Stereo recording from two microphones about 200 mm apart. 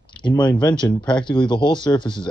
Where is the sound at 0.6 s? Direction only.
20° left (ahead or behind).